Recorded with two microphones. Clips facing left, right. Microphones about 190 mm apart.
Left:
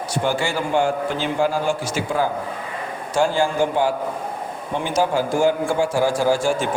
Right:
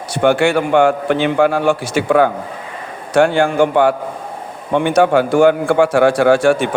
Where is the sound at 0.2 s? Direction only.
65° right (ahead or behind).